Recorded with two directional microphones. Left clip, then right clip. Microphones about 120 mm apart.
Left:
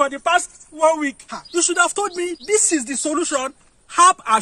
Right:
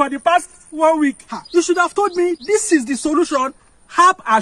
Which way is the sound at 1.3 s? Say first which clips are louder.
Right 3 dB; 40° left (ahead or behind).